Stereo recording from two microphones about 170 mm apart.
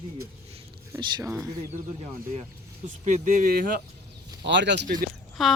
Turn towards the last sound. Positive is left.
turn(degrees=0)  # may be behind; listen again after turning